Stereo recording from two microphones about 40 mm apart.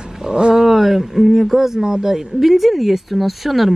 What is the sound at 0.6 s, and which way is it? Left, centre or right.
Speech, centre.